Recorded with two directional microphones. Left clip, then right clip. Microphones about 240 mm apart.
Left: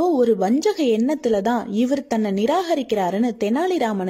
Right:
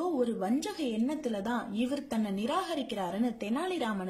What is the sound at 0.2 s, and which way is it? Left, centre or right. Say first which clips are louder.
A woman's voice: left 14 dB; left.